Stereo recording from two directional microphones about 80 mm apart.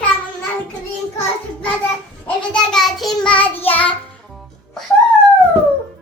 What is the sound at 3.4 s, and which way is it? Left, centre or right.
Child singing, left.